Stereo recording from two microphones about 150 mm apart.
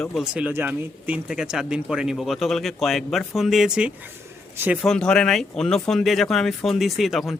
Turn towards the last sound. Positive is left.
turn(degrees=0)  # may be behind; listen again after turning